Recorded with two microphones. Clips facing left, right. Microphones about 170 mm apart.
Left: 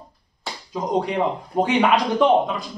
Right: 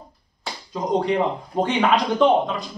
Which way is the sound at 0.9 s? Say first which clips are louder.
Right 1 dB; centre (ahead or behind).